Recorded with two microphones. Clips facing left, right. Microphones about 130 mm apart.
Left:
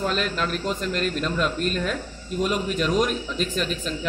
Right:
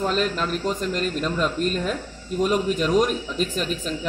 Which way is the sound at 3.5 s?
5° right (ahead or behind).